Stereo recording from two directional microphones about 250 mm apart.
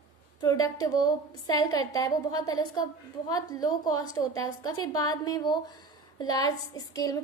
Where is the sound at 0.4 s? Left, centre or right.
Centre.